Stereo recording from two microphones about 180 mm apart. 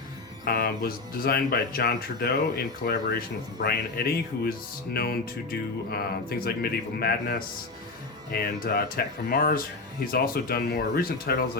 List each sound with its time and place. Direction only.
0.4 s speech: 55° left (ahead or behind)